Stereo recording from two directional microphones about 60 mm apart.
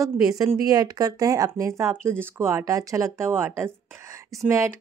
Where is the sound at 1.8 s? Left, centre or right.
Right.